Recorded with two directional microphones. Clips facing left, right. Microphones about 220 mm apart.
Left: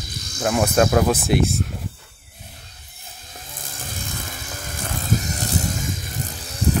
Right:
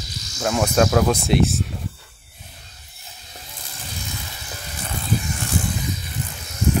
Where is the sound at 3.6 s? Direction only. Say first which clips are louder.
Left 2 dB; 50° left (ahead or behind).